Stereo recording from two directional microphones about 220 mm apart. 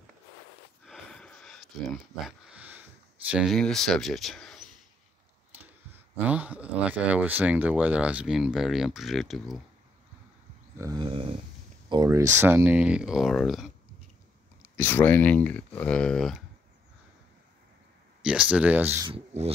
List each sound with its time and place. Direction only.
0.8 s a sound: 5° left (ahead or behind)
2.2 s speech: 5° right (ahead or behind)
6.2 s speech: 5° right (ahead or behind)
10.8 s a sound: 20° right (ahead or behind)
11.9 s speech: 15° right (ahead or behind); by 13.7 s centre (ahead or behind)
14.6 s speech: 10° left (ahead or behind)
18.2 s speech: 5° right (ahead or behind)
19.0 s speech: 25° right (ahead or behind)